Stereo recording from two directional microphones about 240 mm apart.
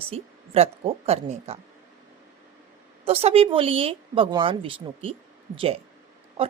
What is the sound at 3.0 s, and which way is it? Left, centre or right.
Speech, right.